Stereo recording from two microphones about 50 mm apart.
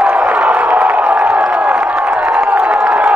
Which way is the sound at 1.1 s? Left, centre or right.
Right.